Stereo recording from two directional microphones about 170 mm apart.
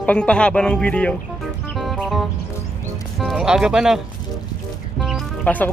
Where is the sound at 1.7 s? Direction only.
Centre (ahead or behind).